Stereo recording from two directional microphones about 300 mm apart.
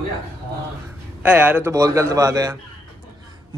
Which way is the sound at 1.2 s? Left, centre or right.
Centre.